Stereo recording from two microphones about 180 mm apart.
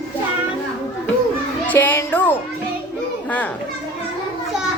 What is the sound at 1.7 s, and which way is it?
Music, 10° left (ahead or behind).